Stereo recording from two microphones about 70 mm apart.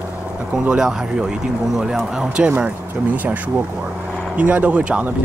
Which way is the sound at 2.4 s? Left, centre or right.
Right.